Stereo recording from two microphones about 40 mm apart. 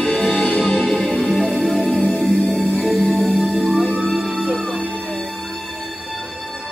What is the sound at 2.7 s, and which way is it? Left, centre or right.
Music, centre.